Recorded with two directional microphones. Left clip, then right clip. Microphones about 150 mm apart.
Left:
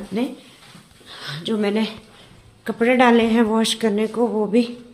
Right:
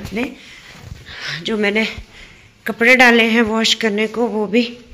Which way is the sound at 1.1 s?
5° right (ahead or behind).